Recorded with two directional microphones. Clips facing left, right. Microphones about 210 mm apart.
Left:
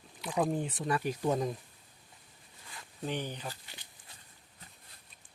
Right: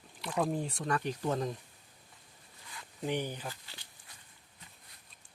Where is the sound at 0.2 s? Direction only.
5° left (ahead or behind).